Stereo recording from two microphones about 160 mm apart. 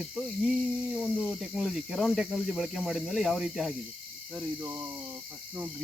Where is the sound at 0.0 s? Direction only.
5° right (ahead or behind).